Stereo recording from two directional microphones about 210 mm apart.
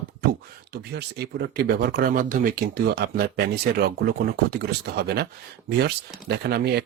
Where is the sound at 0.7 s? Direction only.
50° right (ahead or behind).